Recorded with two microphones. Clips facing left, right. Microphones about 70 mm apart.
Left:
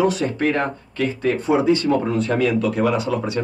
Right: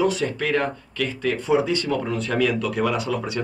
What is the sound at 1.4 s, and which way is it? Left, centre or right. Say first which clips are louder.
Speech: left 4 dB; left.